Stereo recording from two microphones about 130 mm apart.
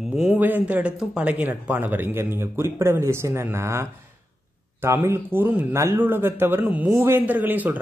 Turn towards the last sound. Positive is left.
turn(degrees=-15)  # may be behind; listen again after turning